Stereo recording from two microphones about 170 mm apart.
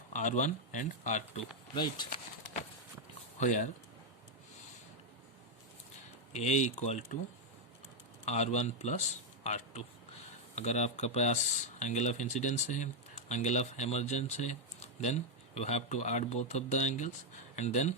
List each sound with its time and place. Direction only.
0.1 s speech: 45° left (ahead or behind)
1.7 s speech: 25° left (ahead or behind)
3.3 s speech: 45° left (ahead or behind)
6.3 s speech: 40° left (ahead or behind)
8.2 s speech: 40° left (ahead or behind)